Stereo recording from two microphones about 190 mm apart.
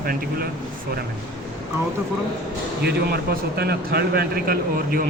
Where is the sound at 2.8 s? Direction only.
55° right (ahead or behind).